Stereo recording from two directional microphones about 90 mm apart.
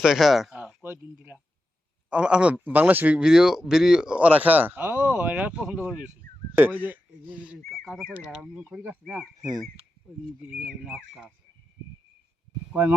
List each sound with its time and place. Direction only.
0.0 s speech: 5° right (ahead or behind)
0.8 s speech: 20° right (ahead or behind)
7.6 s speech: centre (ahead or behind)
8.8 s speech: 15° right (ahead or behind)
9.4 s speech: 45° right (ahead or behind)
10.4 s speech: 15° right (ahead or behind)